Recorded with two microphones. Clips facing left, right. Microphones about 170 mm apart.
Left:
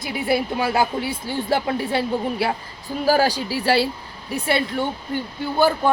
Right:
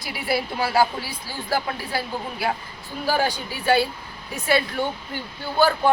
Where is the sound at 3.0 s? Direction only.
40° left (ahead or behind).